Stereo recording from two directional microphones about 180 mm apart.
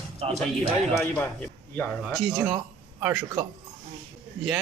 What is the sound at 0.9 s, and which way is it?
Speech, 15° left (ahead or behind).